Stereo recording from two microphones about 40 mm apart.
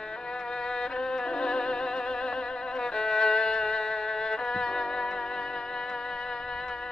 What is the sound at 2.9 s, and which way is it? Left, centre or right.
Music, centre.